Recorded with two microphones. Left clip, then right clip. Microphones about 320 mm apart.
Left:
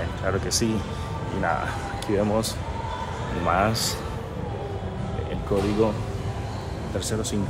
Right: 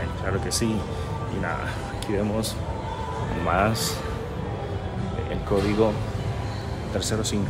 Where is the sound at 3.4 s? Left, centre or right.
Centre.